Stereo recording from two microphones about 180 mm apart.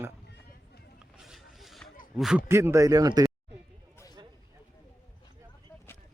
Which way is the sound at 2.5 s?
15° right (ahead or behind).